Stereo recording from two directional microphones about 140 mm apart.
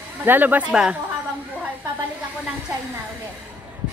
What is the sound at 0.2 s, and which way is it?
Speech, 15° right (ahead or behind).